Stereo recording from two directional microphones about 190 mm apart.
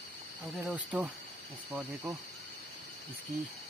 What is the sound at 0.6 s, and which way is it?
Speech, 10° right (ahead or behind).